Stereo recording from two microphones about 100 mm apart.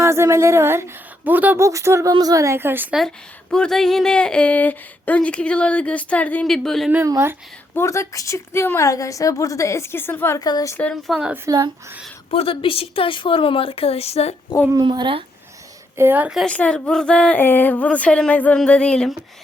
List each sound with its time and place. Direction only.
0.0 s a woman's voice: 30° right (ahead or behind)
1.5 s a woman's voice: 30° right (ahead or behind)
3.5 s speech: 5° left (ahead or behind)
6.4 s speech: 5° left (ahead or behind)
7.0 s a woman's voice: 25° right (ahead or behind)
7.8 s a woman's voice: 30° left (ahead or behind)
10.3 s a woman's voice: 40° left (ahead or behind)
10.9 s speech: centre (ahead or behind)
11.4 s speech: 40° right (ahead or behind)
12.3 s speech: 65° left (ahead or behind); by 14.3 s 90° left
14.8 s speech: 55° right (ahead or behind)
16.0 s a woman's voice: 20° right (ahead or behind)
16.5 s speech: 10° left (ahead or behind)